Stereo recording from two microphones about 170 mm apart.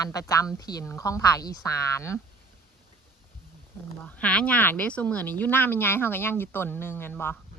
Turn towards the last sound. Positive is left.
turn(degrees=15)  # may be behind; listen again after turning